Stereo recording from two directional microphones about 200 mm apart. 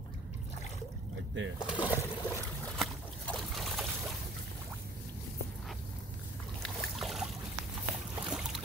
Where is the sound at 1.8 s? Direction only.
15° left (ahead or behind).